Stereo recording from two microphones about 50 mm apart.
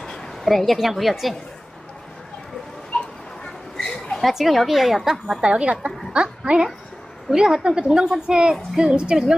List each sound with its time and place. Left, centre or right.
0.0 s a woman's voice: centre
3.8 s a sound: centre
4.2 s a woman's voice: centre
5.4 s a woman's voice: right